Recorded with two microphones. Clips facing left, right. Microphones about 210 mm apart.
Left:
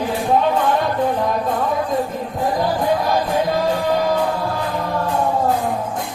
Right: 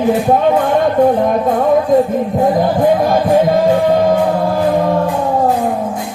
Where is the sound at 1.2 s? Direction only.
50° right (ahead or behind).